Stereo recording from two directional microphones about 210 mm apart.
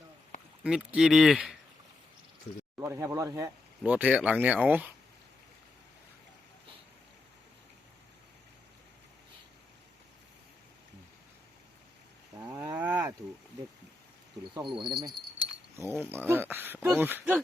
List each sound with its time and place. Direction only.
0.6 s speech: 5° right (ahead or behind)
2.7 s speech: 10° right (ahead or behind)
12.4 s cattle: 15° right (ahead or behind)
14.5 s speech: 20° right (ahead or behind)
16.0 s speech: 10° right (ahead or behind)